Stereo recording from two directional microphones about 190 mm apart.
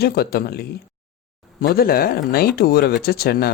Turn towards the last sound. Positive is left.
turn(degrees=55)  # may be behind; listen again after turning